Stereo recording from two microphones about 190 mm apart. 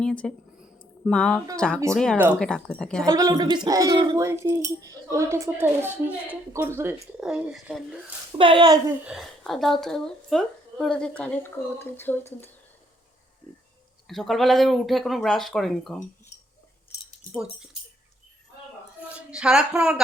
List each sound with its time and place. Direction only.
0.0 s speech: 5° left (ahead or behind)
2.1 s speech: 10° right (ahead or behind)
2.4 s speech: 5° left (ahead or behind)
3.1 s speech: 20° right (ahead or behind); by 7.9 s centre (ahead or behind)
8.4 s a woman's voice: 25° right (ahead or behind)
9.0 s speech: centre (ahead or behind)
13.4 s a sound: 10° left (ahead or behind)
14.1 s speech: centre (ahead or behind)
17.3 s speech: 5° right (ahead or behind)
19.0 s speech: 5° right (ahead or behind)